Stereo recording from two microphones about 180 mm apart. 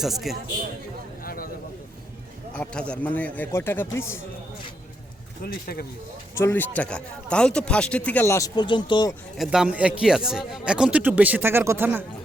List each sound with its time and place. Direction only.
0.0 s a man's voice: centre (ahead or behind)
1.2 s a sound: 55° left (ahead or behind)
2.5 s a man's voice: 5° left (ahead or behind)
5.4 s speech: 55° left (ahead or behind)
6.3 s a man's voice: 10° left (ahead or behind)
9.4 s a man's voice: 5° right (ahead or behind)